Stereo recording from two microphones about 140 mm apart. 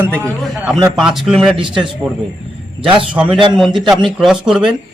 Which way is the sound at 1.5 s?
35° right (ahead or behind).